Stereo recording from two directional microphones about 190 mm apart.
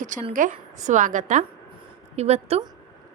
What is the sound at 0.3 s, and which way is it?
A woman's voice, 40° right (ahead or behind).